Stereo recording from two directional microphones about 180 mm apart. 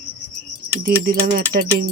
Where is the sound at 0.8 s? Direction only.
50° right (ahead or behind).